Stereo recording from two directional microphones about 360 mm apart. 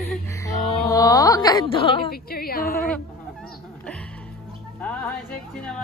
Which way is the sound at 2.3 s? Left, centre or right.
Left.